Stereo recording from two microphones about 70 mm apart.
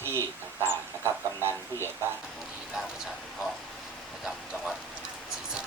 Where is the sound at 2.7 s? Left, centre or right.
Centre.